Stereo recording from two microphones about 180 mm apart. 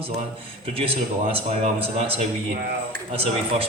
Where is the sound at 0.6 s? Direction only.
30° right (ahead or behind).